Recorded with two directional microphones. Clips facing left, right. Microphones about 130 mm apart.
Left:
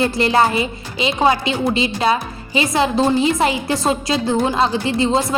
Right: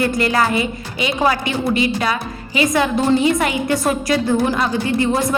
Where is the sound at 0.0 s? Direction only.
25° left (ahead or behind).